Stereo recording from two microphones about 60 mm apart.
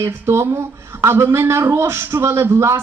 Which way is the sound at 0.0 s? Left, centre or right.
Right.